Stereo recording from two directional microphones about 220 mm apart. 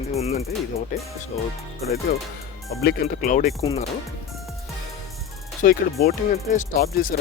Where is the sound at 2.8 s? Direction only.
40° left (ahead or behind).